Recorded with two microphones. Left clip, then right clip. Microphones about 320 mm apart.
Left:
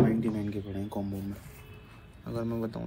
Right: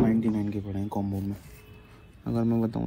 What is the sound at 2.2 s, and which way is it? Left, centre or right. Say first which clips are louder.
Speech: right 6 dB; centre.